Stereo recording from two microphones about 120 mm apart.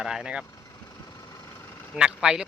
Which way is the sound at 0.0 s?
5° right (ahead or behind).